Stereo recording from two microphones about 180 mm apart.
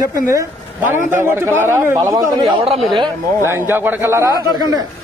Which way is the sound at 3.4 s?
15° right (ahead or behind).